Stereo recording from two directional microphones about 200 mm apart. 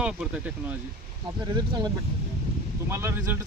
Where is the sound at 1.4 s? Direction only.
20° right (ahead or behind).